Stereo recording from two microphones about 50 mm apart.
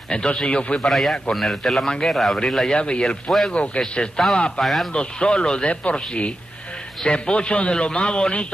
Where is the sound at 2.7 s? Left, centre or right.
Centre.